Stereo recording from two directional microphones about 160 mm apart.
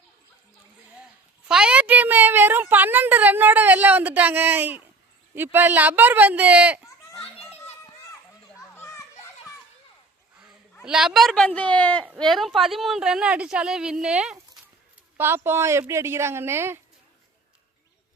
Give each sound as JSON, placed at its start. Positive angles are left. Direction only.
{"t": 1.5, "sound": "a sound", "side_deg": -5}
{"t": 5.3, "sound": "speech", "side_deg": -15}
{"t": 8.7, "sound": "children playing", "side_deg": 15}
{"t": 10.8, "sound": "speech", "side_deg": -5}